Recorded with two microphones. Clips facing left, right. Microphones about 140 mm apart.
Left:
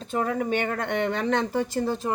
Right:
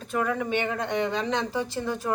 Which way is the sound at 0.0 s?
30° left (ahead or behind).